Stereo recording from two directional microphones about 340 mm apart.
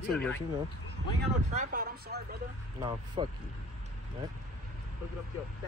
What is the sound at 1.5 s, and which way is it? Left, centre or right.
Speech, right.